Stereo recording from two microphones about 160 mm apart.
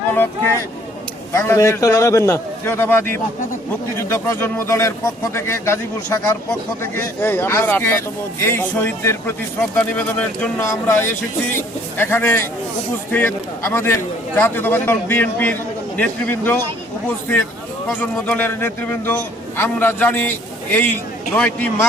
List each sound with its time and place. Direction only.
0.1 s a sound: 10° left (ahead or behind)
1.3 s a man's voice: 15° left (ahead or behind)
18.0 s a man's voice: 10° left (ahead or behind)
21.3 s a man's voice: 10° left (ahead or behind)